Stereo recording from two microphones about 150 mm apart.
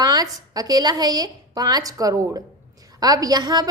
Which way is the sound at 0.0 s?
25° right (ahead or behind).